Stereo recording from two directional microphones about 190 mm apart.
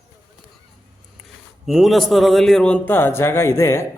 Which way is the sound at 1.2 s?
Centre (ahead or behind).